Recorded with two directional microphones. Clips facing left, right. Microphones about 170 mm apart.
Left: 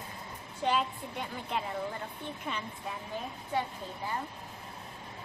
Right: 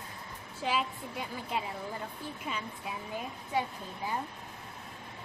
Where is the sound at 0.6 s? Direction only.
5° right (ahead or behind).